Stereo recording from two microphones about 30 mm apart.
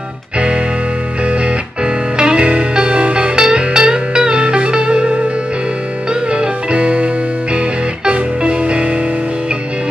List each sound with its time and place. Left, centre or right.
2.1 s music: right
6.3 s music: right